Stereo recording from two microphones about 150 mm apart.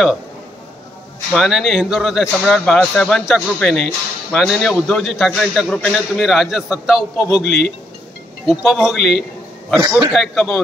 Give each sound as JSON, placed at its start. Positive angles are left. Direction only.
{"t": 1.3, "sound": "a man's voice", "side_deg": 0}
{"t": 9.8, "sound": "a man's voice", "side_deg": -30}
{"t": 10.1, "sound": "a man's voice", "side_deg": 0}